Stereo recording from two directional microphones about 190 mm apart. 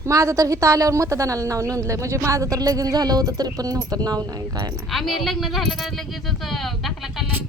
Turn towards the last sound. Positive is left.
turn(degrees=0)  # may be behind; listen again after turning